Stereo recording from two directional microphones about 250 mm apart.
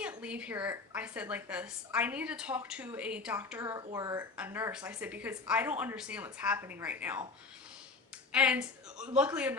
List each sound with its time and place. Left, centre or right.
0.0 s a woman's voice: centre
8.3 s a woman's voice: centre